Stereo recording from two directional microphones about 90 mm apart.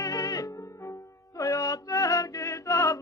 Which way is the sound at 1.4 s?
40° left (ahead or behind).